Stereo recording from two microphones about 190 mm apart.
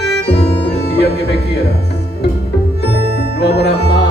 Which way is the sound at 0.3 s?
60° left (ahead or behind).